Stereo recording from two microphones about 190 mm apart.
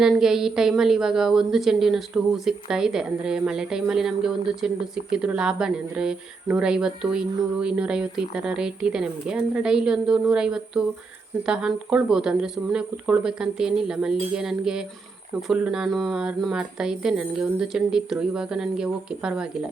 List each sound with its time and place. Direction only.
0.0 s speech: centre (ahead or behind)